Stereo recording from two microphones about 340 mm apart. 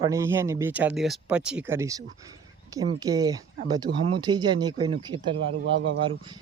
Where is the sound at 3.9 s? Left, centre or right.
Right.